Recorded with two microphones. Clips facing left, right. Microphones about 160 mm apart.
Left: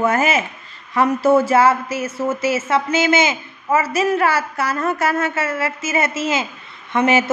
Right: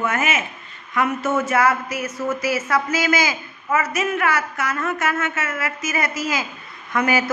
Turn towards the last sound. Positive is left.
turn(degrees=25)  # may be behind; listen again after turning